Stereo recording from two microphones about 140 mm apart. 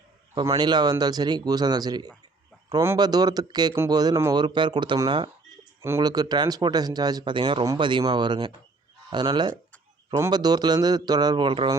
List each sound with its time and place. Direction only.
0.3 s speech: 30° right (ahead or behind)
4.4 s speech: 35° right (ahead or behind)